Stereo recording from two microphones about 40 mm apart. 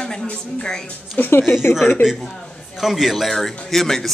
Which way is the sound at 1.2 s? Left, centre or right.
Left.